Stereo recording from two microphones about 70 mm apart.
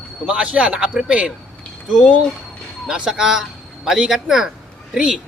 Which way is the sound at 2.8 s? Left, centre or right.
Centre.